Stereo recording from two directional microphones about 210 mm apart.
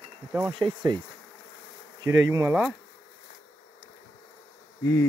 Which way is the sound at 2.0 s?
15° right (ahead or behind).